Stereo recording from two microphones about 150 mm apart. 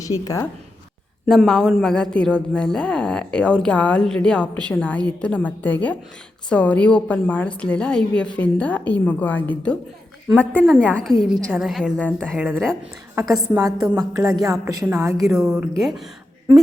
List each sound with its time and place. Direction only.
0.0 s a woman's voice: 20° left (ahead or behind)
1.3 s a woman's voice: 5° left (ahead or behind)
12.4 s speech: 15° right (ahead or behind)
13.6 s a woman's voice: 25° right (ahead or behind)
15.3 s speech: centre (ahead or behind)